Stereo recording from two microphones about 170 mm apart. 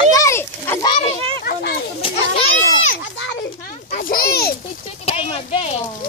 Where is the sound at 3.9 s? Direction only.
60° left (ahead or behind).